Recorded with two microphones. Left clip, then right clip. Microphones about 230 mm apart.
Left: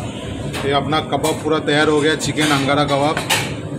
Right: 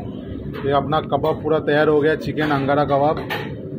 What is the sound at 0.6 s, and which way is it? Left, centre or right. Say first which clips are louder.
Speech: left 1 dB; centre.